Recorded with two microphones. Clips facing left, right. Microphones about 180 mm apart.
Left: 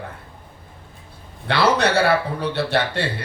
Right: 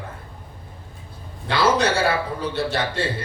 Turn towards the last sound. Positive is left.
turn(degrees=65)  # may be behind; listen again after turning